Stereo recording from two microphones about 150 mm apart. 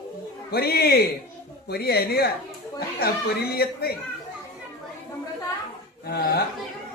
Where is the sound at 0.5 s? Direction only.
90° left.